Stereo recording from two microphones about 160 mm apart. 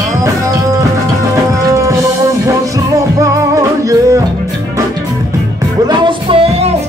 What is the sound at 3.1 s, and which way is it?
Music, 20° right (ahead or behind).